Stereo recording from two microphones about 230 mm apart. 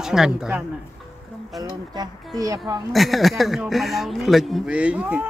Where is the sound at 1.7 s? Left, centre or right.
Centre.